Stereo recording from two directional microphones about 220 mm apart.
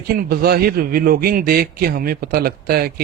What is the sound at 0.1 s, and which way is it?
A man's voice, 45° right (ahead or behind).